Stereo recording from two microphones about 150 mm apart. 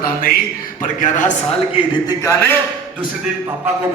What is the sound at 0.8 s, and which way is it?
Speech, 60° left (ahead or behind).